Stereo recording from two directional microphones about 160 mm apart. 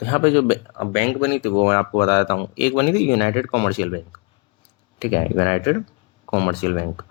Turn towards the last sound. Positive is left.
turn(degrees=35)  # may be behind; listen again after turning